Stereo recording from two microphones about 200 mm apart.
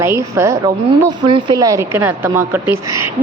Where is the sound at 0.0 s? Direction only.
10° right (ahead or behind).